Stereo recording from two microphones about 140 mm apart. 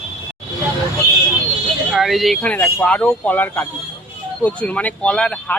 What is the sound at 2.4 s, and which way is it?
Speech, 10° left (ahead or behind).